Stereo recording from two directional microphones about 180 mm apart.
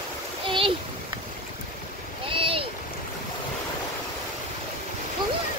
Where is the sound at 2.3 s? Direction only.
30° right (ahead or behind).